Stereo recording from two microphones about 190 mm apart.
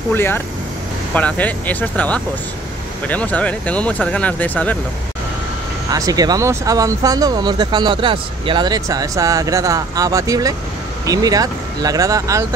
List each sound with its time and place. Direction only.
0.1 s speech: 10° left (ahead or behind)
5.9 s speech: 20° right (ahead or behind)